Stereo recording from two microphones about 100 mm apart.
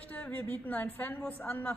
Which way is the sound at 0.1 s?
20° left (ahead or behind).